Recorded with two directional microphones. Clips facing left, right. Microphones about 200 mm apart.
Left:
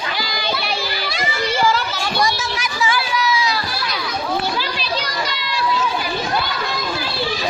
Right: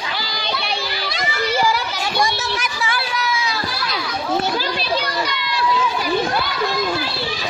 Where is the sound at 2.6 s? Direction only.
55° right (ahead or behind).